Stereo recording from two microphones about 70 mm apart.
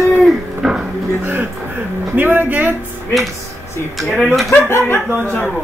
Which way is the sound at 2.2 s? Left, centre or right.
Right.